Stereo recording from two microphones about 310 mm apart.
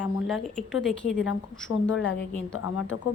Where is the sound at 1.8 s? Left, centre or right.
Left.